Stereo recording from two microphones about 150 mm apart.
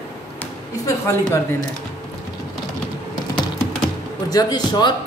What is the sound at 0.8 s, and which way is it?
Speech, 20° left (ahead or behind).